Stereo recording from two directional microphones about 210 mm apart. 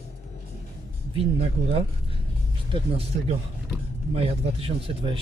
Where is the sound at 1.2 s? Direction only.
30° right (ahead or behind).